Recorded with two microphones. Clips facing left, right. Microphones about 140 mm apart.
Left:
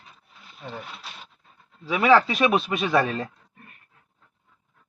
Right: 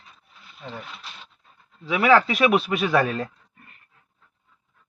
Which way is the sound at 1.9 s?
5° right (ahead or behind).